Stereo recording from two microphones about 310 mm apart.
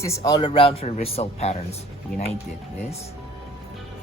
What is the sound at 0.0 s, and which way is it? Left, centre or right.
A man's voice, centre.